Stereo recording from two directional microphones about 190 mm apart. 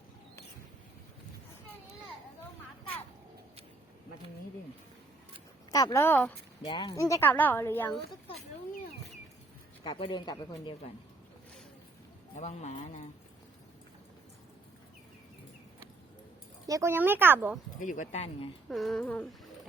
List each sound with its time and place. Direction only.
5.7 s a woman's voice: 15° left (ahead or behind)
6.7 s a woman's voice: 25° left (ahead or behind)
9.8 s speech: 25° left (ahead or behind)
12.4 s speech: 35° left (ahead or behind)
16.6 s speech: 15° right (ahead or behind)
17.7 s speech: 40° left (ahead or behind)
18.7 s a sound: centre (ahead or behind)